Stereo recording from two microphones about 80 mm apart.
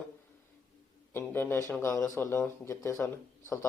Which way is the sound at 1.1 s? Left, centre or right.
Left.